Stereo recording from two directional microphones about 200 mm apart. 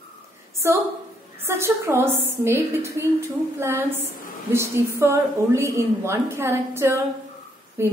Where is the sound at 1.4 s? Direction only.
10° right (ahead or behind).